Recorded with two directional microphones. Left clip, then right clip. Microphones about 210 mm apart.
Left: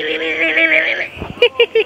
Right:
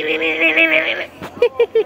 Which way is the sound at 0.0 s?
50° right (ahead or behind).